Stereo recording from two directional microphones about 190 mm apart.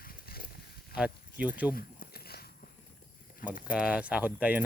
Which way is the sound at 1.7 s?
50° left (ahead or behind).